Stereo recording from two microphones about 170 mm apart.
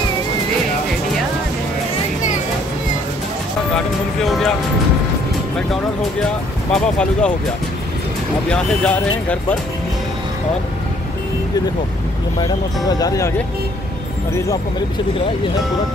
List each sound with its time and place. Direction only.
3.7 s speech: centre (ahead or behind)
6.7 s speech: 5° left (ahead or behind)
8.5 s speech: 5° left (ahead or behind)
12.4 s speech: 20° left (ahead or behind)